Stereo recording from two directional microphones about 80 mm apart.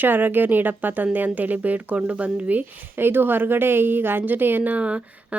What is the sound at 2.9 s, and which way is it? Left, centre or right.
Speech, right.